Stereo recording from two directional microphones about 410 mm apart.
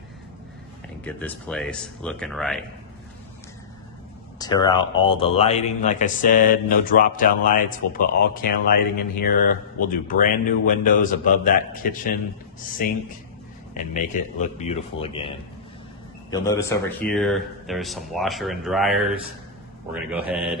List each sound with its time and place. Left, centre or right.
1.0 s speech: centre
4.4 s a man's voice: centre
13.7 s a man's voice: centre